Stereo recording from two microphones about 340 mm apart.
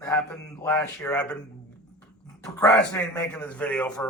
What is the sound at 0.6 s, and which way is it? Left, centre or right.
Speech, centre.